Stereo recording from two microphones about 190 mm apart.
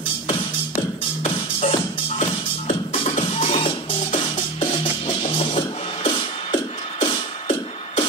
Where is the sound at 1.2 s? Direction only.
35° left (ahead or behind).